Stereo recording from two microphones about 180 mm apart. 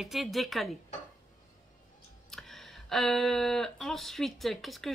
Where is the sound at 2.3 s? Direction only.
Centre (ahead or behind).